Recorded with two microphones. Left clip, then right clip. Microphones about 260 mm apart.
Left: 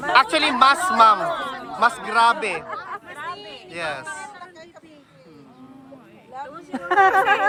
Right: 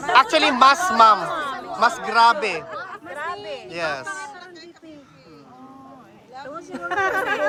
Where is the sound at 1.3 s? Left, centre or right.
Right.